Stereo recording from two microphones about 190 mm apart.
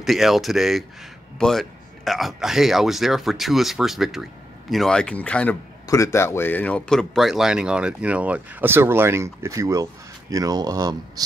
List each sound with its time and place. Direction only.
0.0 s speech: centre (ahead or behind); by 11.2 s 20° right (ahead or behind)